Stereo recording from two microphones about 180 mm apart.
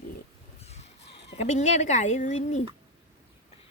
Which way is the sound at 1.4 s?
40° left (ahead or behind).